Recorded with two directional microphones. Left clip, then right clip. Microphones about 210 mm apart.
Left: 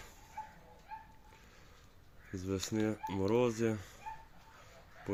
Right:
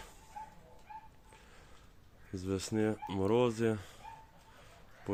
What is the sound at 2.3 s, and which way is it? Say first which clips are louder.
Speech: right 1 dB; 5° right (ahead or behind).